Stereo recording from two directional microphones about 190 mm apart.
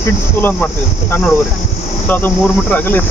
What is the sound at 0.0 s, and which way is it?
Speech, 10° left (ahead or behind).